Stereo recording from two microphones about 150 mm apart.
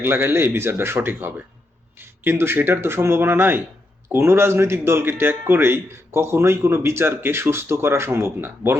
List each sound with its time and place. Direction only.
0.0 s speech: 15° right (ahead or behind)